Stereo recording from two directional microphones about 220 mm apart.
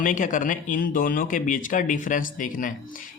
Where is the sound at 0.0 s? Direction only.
35° left (ahead or behind).